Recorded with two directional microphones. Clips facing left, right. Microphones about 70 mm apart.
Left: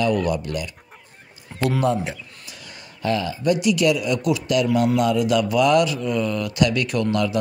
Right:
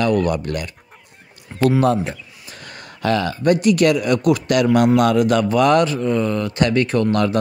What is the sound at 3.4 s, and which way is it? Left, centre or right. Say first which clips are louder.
A man's voice: right 5 dB; right.